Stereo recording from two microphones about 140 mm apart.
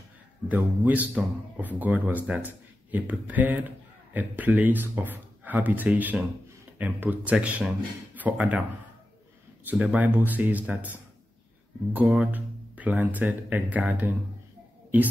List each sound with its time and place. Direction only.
0.5 s speech: 10° right (ahead or behind)
9.7 s speech: 10° right (ahead or behind)